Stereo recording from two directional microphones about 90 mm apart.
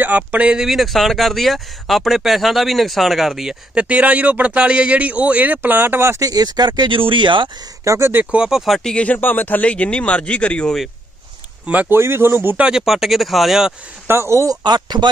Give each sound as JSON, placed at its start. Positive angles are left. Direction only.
{"t": 0.0, "sound": "speech", "side_deg": -15}
{"t": 0.7, "sound": "speech", "side_deg": 0}
{"t": 6.2, "sound": "speech", "side_deg": -45}
{"t": 6.9, "sound": "speech", "side_deg": -65}
{"t": 7.8, "sound": "speech", "side_deg": -35}
{"t": 8.1, "sound": "speech", "side_deg": -15}
{"t": 11.6, "sound": "speech", "side_deg": -15}
{"t": 12.6, "sound": "speech", "side_deg": -5}
{"t": 14.0, "sound": "speech", "side_deg": -25}
{"t": 14.6, "sound": "speech", "side_deg": -55}